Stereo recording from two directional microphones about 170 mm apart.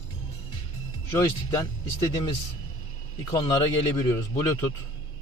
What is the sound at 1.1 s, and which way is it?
A man's voice, 20° left (ahead or behind).